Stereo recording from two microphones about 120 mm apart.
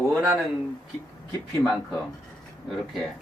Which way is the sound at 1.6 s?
5° left (ahead or behind).